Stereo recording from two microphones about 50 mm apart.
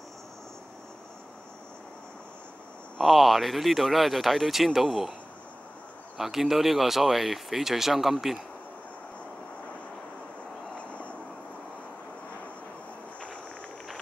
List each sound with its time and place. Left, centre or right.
3.0 s speech: centre
6.1 s speech: centre
10.8 s vehicle: left